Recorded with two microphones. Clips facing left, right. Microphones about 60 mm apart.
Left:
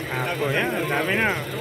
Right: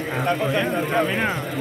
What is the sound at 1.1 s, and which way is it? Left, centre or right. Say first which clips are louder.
Speech: left 1 dB; centre.